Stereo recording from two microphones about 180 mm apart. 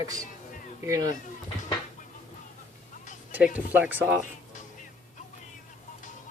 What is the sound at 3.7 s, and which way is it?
Speech, 10° right (ahead or behind).